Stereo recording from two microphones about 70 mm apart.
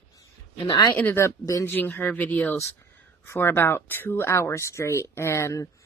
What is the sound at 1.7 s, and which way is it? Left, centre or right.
Speech, left.